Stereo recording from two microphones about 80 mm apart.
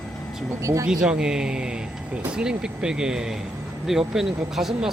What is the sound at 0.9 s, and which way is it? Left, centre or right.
Speech, centre.